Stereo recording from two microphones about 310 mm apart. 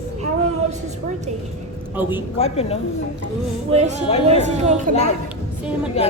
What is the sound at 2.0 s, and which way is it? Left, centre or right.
Speech, centre.